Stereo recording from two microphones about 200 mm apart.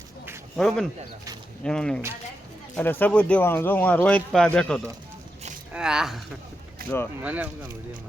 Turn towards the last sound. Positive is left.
turn(degrees=-10)  # may be behind; listen again after turning